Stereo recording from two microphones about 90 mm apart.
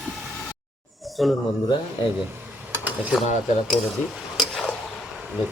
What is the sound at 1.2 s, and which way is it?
Speech, centre (ahead or behind).